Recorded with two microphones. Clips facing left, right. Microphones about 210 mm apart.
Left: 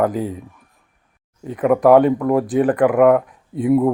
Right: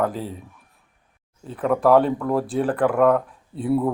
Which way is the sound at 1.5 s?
10° left (ahead or behind).